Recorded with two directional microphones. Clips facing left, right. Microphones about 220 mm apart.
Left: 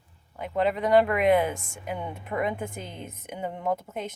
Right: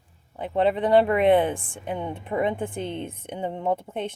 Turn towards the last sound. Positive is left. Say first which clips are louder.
# right 3 dB
turn(degrees=-30)  # may be behind; listen again after turning